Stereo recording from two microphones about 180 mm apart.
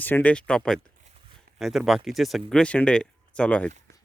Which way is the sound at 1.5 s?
Centre (ahead or behind).